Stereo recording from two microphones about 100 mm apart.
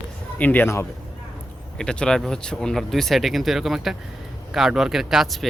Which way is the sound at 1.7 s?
10° left (ahead or behind).